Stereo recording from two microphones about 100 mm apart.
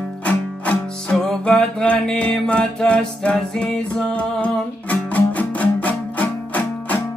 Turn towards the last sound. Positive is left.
turn(degrees=15)  # may be behind; listen again after turning